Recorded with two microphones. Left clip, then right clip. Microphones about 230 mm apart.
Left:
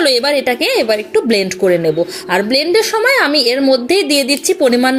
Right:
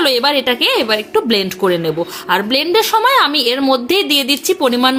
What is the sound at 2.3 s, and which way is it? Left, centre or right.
Speech, centre.